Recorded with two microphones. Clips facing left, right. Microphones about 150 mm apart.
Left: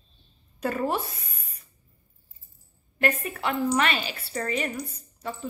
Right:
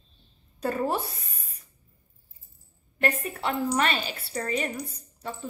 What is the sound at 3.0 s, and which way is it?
Speech, 35° right (ahead or behind).